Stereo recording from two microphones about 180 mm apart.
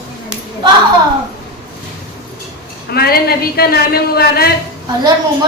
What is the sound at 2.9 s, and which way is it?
A woman's voice, 60° left (ahead or behind).